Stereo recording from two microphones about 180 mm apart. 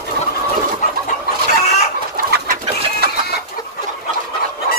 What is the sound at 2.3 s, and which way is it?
Bird, 55° right (ahead or behind).